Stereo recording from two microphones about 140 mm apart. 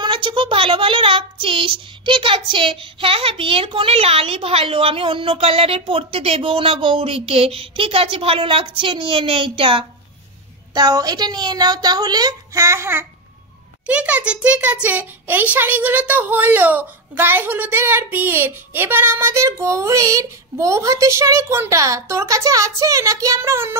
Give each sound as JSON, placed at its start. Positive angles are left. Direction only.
{"t": 0.0, "sound": "a child's voice", "side_deg": -35}